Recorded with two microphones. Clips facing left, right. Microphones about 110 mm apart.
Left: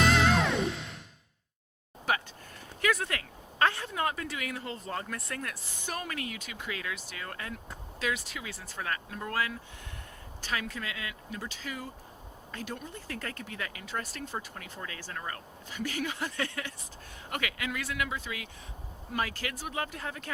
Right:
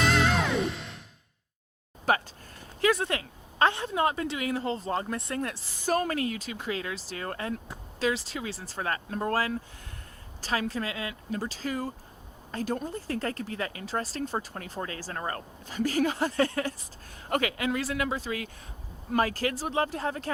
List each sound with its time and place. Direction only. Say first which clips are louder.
0.0 s music: even; centre (ahead or behind)
2.1 s speech: right 5 dB; 40° right (ahead or behind)
2.8 s a woman's voice: right 5 dB; 30° right (ahead or behind)
5.8 s speech: right 10 dB; 40° right (ahead or behind)